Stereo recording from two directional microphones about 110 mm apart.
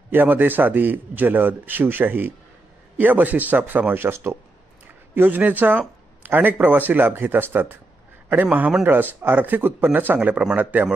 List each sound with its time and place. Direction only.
0.1 s speech: 15° right (ahead or behind)